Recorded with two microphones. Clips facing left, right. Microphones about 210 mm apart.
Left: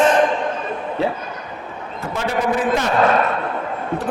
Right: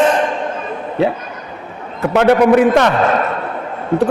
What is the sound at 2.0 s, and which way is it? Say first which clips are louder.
Speech: right 11 dB; 65° right (ahead or behind).